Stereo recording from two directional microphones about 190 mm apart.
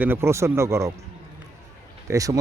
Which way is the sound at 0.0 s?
10° right (ahead or behind).